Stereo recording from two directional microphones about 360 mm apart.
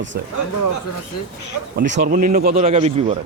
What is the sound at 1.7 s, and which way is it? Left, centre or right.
Speech, right.